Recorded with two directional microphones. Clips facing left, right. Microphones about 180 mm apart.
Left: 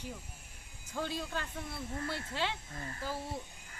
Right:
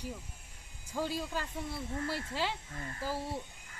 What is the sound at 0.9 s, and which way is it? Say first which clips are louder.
Speech: right 2 dB; 5° right (ahead or behind).